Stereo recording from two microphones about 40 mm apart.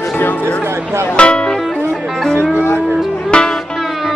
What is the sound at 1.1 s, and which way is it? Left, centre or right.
Music, left.